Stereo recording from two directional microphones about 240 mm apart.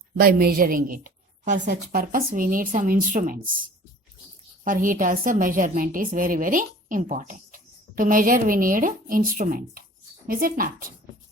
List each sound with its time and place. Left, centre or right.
0.2 s a woman's voice: right
4.6 s a woman's voice: right